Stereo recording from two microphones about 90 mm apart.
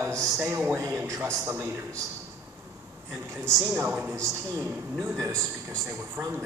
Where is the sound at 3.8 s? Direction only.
15° right (ahead or behind).